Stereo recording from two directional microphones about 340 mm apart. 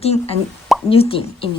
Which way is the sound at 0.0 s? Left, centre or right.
Centre.